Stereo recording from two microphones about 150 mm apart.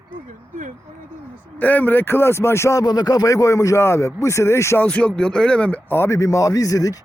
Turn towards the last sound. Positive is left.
turn(degrees=20)  # may be behind; listen again after turning